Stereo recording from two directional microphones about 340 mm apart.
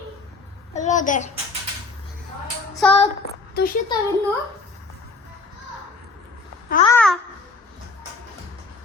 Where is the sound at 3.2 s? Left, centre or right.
Left.